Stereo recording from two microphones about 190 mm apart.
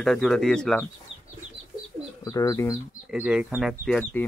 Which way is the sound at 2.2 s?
20° left (ahead or behind).